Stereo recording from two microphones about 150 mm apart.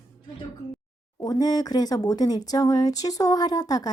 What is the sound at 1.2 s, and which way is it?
Speech, 25° left (ahead or behind).